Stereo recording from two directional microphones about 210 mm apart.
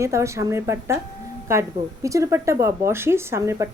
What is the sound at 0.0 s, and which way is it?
A woman's voice, 15° right (ahead or behind).